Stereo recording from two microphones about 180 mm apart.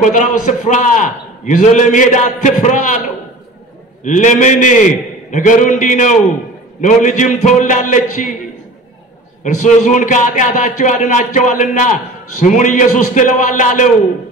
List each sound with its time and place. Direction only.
0.0 s a man's voice: 45° left (ahead or behind)
4.0 s a man's voice: 45° left (ahead or behind)
9.4 s a man's voice: 45° left (ahead or behind)